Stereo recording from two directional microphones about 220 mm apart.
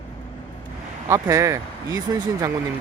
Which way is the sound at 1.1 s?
15° right (ahead or behind).